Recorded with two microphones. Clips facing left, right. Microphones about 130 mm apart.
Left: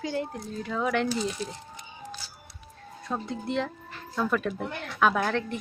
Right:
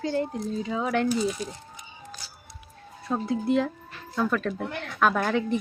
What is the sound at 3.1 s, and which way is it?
Speech, 5° right (ahead or behind).